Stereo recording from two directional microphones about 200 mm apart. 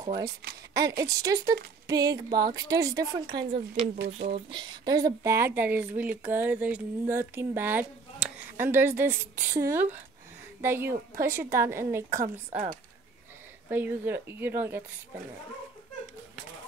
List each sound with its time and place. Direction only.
0.0 s a woman's voice: 20° right (ahead or behind)
4.0 s speech: 55° right (ahead or behind)
4.5 s a woman's voice: 25° right (ahead or behind)
13.7 s a woman's voice: 10° right (ahead or behind)